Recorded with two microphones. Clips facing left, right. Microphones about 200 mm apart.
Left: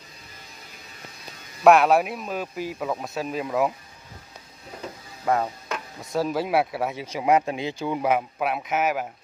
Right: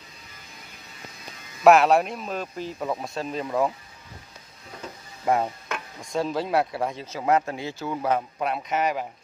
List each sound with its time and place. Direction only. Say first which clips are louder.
1.6 s speech: even; centre (ahead or behind)
5.2 s stir: even; 20° right (ahead or behind)
5.9 s speech: left 1 dB; 5° left (ahead or behind)